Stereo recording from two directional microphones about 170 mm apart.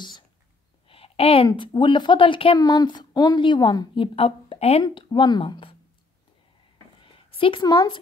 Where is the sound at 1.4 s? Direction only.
25° left (ahead or behind).